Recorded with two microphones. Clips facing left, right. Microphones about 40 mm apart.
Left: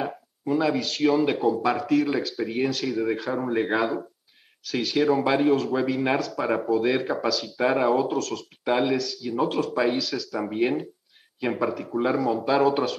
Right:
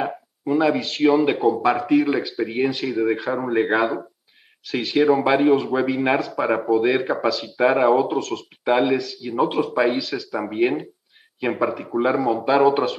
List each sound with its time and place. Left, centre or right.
0.0 s speech: centre